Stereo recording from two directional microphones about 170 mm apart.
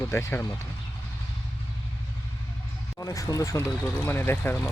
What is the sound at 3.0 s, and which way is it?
Speech, 20° left (ahead or behind).